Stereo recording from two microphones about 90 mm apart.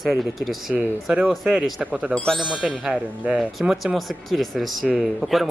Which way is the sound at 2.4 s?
10° right (ahead or behind).